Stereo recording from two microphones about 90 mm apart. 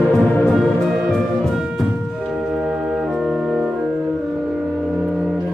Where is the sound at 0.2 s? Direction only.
15° left (ahead or behind).